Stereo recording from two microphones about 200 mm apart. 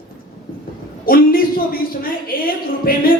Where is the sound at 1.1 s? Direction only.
45° left (ahead or behind).